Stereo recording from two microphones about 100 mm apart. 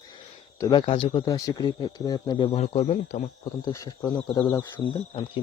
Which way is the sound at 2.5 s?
75° left (ahead or behind).